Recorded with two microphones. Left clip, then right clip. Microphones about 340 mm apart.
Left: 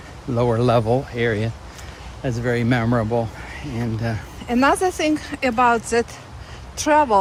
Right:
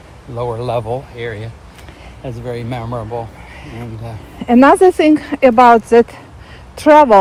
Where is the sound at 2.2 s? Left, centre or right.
Left.